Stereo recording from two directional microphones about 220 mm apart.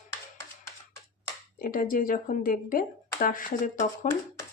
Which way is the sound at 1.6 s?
40° left (ahead or behind).